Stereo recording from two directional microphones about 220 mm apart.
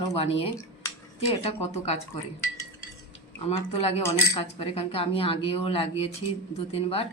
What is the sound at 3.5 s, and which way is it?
Speech, 30° left (ahead or behind).